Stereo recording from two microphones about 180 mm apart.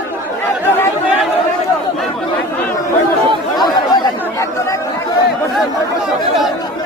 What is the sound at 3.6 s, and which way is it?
Chatter, 20° left (ahead or behind).